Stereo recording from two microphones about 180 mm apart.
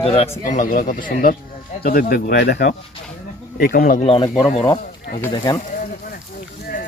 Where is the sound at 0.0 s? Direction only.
35° left (ahead or behind); by 4.0 s 55° left (ahead or behind).